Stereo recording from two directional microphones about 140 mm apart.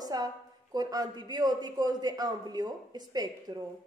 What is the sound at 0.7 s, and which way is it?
A woman's voice, 25° right (ahead or behind).